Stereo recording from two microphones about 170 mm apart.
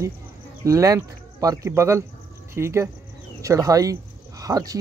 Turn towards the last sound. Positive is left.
turn(degrees=-20)  # may be behind; listen again after turning